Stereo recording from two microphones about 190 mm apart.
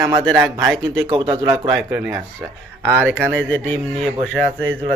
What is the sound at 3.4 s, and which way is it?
Speech, 10° left (ahead or behind).